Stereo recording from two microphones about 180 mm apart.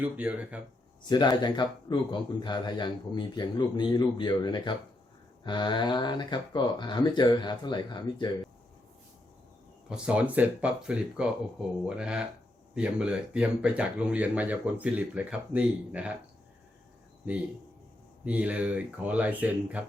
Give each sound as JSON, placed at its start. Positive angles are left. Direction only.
{"t": 0.0, "sound": "speech", "side_deg": -10}
{"t": 1.0, "sound": "a man's voice", "side_deg": 25}
{"t": 9.9, "sound": "speech", "side_deg": -5}
{"t": 18.3, "sound": "speech", "side_deg": -10}